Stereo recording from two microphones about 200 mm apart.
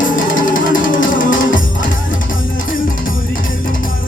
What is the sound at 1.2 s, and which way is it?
Music, 40° left (ahead or behind).